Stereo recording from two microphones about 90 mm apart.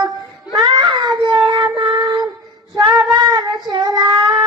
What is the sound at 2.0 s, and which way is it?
Child singing, 55° right (ahead or behind).